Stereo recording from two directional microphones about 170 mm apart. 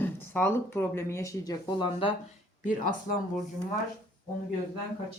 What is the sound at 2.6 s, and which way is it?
Speech, 50° left (ahead or behind).